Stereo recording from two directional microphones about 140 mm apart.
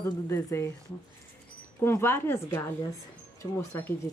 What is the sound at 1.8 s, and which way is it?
Speech, 15° left (ahead or behind).